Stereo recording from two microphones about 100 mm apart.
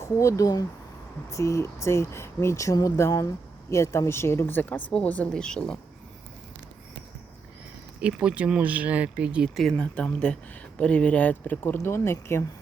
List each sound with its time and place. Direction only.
0.0 s a woman's voice: 30° left (ahead or behind); by 5.8 s 5° left (ahead or behind)
8.0 s speech: 10° right (ahead or behind)
9.6 s a woman's voice: 5° left (ahead or behind); by 12.5 s 25° left (ahead or behind)